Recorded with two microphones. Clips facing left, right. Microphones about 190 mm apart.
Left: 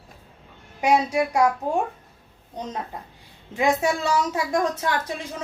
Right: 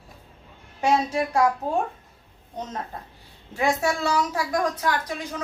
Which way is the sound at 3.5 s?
15° left (ahead or behind).